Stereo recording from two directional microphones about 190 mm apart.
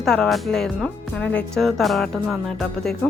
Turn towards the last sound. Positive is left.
turn(degrees=0)  # may be behind; listen again after turning